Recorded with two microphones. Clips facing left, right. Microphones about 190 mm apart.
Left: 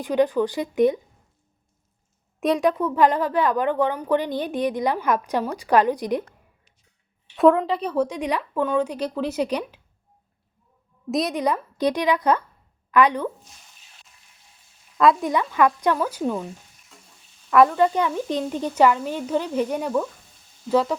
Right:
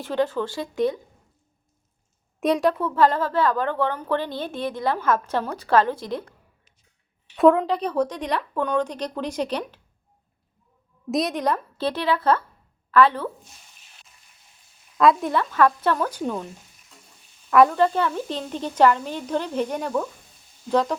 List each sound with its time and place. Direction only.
0.0 s a woman's voice: 15° left (ahead or behind)
2.4 s a woman's voice: centre (ahead or behind)
2.7 s a woman's voice: 15° left (ahead or behind)
7.3 s a woman's voice: centre (ahead or behind)
11.1 s a woman's voice: centre (ahead or behind)
14.9 s speech: centre (ahead or behind)
15.3 s a woman's voice: 15° left (ahead or behind)
17.5 s a woman's voice: centre (ahead or behind)